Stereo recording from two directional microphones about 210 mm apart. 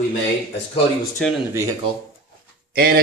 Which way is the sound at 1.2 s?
5° left (ahead or behind).